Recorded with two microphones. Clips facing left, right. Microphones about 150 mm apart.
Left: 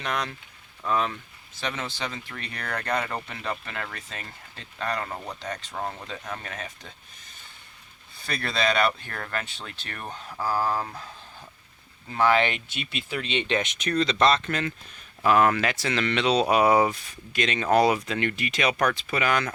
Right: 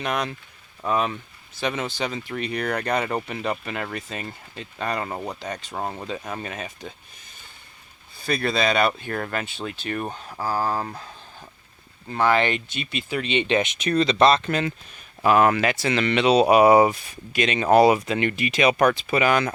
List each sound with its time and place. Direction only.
0.0 s speech: 15° right (ahead or behind)
5.7 s speech: 25° right (ahead or behind)
8.3 s speech: 5° right (ahead or behind)
10.4 s speech: 5° right (ahead or behind)
12.1 s speech: centre (ahead or behind)